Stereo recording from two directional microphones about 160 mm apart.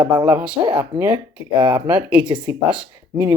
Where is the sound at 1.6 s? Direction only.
30° right (ahead or behind).